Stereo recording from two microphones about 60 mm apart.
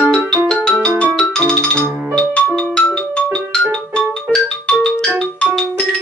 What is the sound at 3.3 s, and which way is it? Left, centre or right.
Marimba, centre.